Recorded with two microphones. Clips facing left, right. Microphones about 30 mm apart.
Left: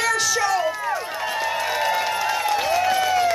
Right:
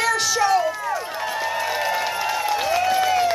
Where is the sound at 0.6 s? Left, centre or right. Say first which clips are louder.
Even; centre.